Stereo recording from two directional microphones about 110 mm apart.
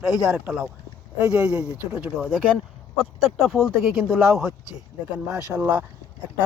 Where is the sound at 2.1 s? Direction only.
Centre (ahead or behind).